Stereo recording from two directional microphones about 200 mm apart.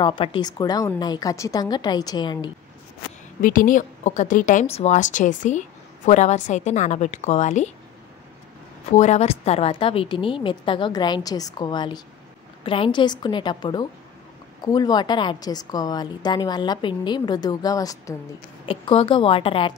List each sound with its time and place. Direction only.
0.0 s a woman's voice: 25° left (ahead or behind)
3.3 s a woman's voice: 45° left (ahead or behind)
8.9 s a woman's voice: 35° left (ahead or behind)